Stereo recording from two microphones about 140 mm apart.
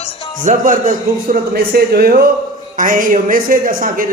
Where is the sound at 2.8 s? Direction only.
75° right (ahead or behind).